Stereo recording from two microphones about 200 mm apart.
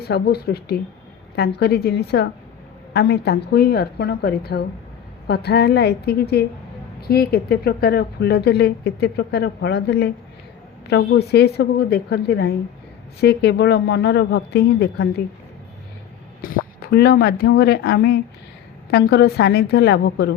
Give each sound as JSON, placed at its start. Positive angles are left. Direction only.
{"t": 0.0, "sound": "speech", "side_deg": 55}
{"t": 16.4, "sound": "speech", "side_deg": 50}